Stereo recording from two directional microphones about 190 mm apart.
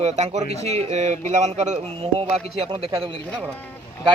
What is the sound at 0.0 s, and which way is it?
Speech, 35° right (ahead or behind).